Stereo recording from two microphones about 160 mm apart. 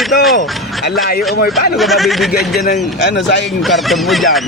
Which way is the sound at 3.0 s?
90° left.